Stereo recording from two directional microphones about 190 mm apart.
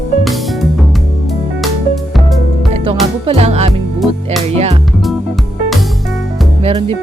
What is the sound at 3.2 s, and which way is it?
Music, 35° right (ahead or behind).